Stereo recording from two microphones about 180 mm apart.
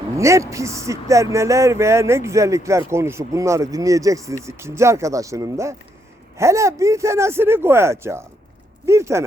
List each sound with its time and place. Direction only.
0.2 s speech: 15° right (ahead or behind)